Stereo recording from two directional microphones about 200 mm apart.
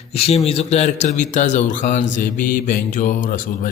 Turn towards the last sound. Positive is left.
turn(degrees=45)  # may be behind; listen again after turning